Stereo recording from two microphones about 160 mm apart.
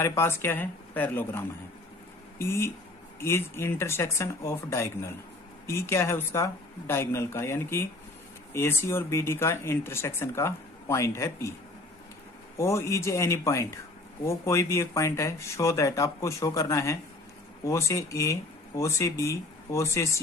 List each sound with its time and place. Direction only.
0.0 s speech: 15° left (ahead or behind)
12.5 s speech: 15° left (ahead or behind)